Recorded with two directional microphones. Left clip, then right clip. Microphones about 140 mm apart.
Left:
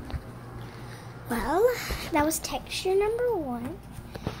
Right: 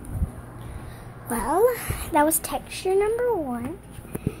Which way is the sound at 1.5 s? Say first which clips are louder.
Right 3 dB; 10° right (ahead or behind).